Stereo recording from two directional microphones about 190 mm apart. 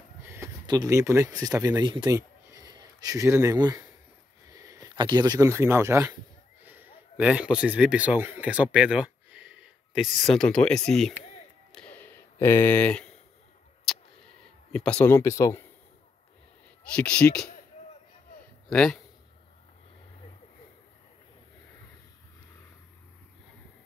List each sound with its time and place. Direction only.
0.2 s a man's voice: 15° right (ahead or behind)
11.7 s a sound: 5° left (ahead or behind)
14.7 s speech: 5° left (ahead or behind)
16.9 s a man's voice: 5° left (ahead or behind)
18.7 s speech: 5° left (ahead or behind)